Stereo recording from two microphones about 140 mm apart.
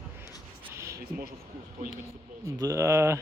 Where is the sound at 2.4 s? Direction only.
20° right (ahead or behind).